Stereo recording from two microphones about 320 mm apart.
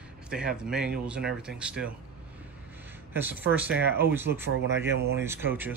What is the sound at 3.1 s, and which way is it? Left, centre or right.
Speech, centre.